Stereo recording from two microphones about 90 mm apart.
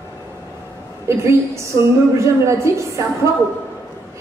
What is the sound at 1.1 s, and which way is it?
A woman's voice, 30° right (ahead or behind).